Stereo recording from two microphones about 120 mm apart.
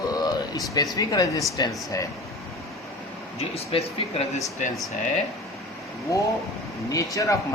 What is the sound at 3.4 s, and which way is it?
Speech, 60° left (ahead or behind).